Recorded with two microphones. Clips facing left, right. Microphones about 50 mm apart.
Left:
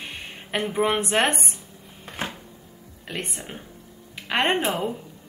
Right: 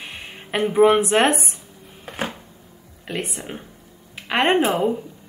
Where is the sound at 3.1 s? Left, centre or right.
Centre.